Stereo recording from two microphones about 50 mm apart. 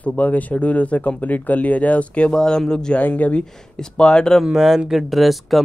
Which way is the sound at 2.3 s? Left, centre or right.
Centre.